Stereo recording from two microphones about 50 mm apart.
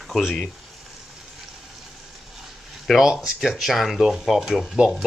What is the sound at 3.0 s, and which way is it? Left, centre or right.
Speech, centre.